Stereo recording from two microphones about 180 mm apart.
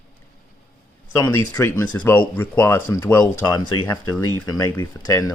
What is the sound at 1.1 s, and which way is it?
Speech, 15° left (ahead or behind).